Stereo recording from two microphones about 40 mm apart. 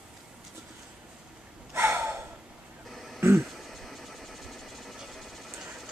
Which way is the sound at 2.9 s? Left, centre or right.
Centre.